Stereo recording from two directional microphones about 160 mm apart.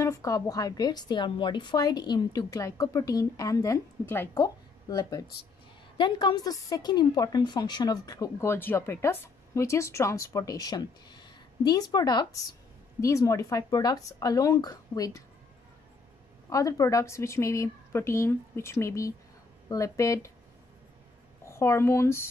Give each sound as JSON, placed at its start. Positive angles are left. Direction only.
{"t": 0.0, "sound": "a woman's voice", "side_deg": 20}
{"t": 16.4, "sound": "a woman's voice", "side_deg": 20}
{"t": 21.5, "sound": "a woman's voice", "side_deg": 15}